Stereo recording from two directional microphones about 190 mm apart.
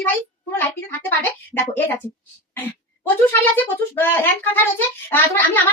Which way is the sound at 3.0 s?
10° left (ahead or behind).